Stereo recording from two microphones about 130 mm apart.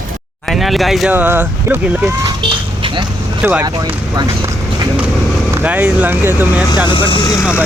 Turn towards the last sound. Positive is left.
turn(degrees=35)  # may be behind; listen again after turning